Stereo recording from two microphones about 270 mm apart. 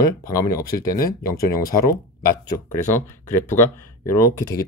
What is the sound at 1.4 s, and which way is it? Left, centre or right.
Speech, left.